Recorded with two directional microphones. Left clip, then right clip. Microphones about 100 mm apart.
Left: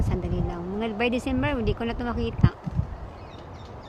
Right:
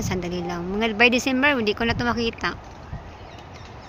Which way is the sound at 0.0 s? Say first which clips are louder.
Right 4 dB; 25° right (ahead or behind).